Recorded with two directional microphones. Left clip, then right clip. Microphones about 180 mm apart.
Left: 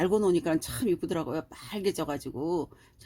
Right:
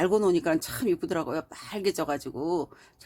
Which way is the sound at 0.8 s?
15° right (ahead or behind).